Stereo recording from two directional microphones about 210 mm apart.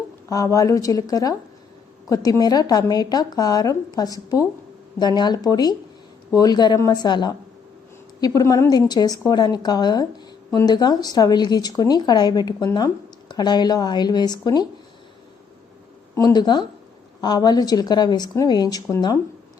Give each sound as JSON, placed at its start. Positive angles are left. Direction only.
{"t": 0.3, "sound": "a woman's voice", "side_deg": 15}
{"t": 16.1, "sound": "a woman's voice", "side_deg": 15}